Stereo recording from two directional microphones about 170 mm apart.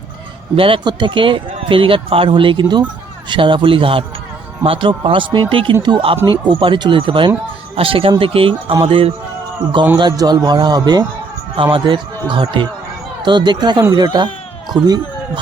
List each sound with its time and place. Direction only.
0.5 s a man's voice: 30° right (ahead or behind)